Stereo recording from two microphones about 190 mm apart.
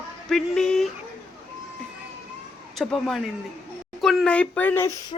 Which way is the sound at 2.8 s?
Centre (ahead or behind).